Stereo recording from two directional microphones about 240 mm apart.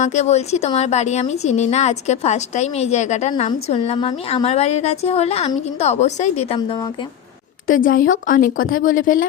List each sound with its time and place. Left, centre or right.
0.0 s a woman's voice: left
7.7 s speech: left